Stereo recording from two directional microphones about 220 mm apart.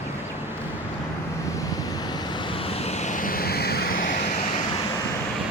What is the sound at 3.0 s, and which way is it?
Vehicle, 35° left (ahead or behind).